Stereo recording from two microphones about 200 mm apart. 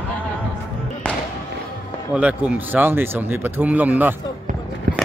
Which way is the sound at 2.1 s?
5° right (ahead or behind).